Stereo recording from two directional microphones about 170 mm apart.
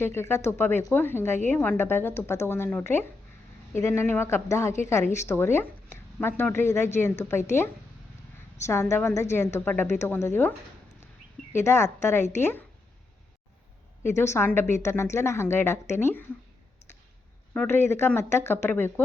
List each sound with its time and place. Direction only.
0.0 s speech: 15° left (ahead or behind)
8.6 s speech: 15° left (ahead or behind)
11.5 s speech: 15° left (ahead or behind)
14.0 s speech: 15° left (ahead or behind)
17.5 s speech: 10° left (ahead or behind)